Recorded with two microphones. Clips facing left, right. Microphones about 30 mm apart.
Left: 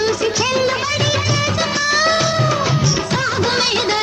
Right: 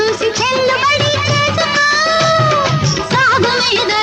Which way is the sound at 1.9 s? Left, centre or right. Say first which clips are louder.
Right 2 dB; centre.